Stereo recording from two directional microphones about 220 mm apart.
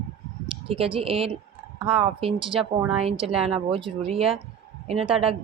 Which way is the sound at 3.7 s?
25° right (ahead or behind).